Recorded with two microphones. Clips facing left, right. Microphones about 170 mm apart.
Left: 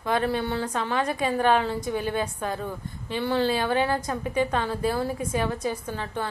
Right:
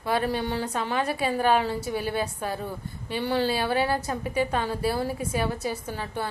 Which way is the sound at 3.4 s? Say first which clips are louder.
Left 1 dB; 35° right (ahead or behind).